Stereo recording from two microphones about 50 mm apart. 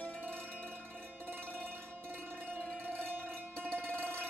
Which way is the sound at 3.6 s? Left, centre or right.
Right.